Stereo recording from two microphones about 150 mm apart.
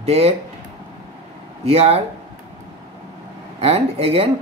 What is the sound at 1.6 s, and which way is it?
Speech, 45° right (ahead or behind).